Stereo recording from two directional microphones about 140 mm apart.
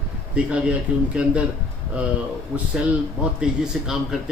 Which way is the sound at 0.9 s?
10° right (ahead or behind).